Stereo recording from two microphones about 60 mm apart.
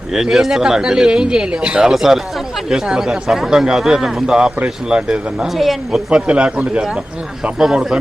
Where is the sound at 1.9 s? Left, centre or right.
Centre.